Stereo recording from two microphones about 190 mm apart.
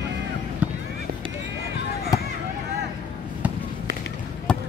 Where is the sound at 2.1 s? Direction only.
20° left (ahead or behind).